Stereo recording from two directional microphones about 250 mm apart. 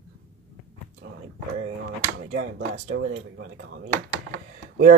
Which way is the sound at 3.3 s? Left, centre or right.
Right.